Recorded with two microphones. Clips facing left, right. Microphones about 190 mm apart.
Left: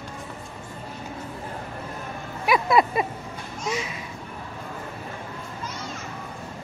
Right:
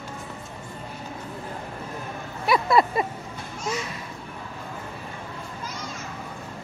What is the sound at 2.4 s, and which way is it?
Vehicle, 20° left (ahead or behind).